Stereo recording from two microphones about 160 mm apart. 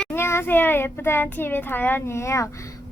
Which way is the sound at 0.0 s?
15° left (ahead or behind).